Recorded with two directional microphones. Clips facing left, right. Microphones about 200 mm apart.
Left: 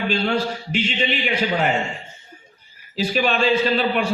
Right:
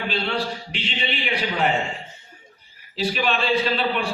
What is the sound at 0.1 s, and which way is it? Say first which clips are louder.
A man's voice: left 4 dB; 45° left (ahead or behind).